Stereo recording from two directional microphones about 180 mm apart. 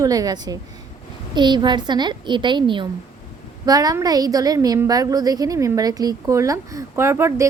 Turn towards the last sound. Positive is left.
turn(degrees=-15)  # may be behind; listen again after turning